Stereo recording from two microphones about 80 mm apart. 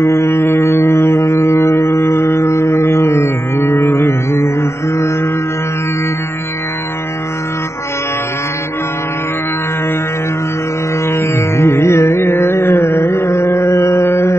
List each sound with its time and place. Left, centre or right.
0.0 s music: left
11.1 s music: left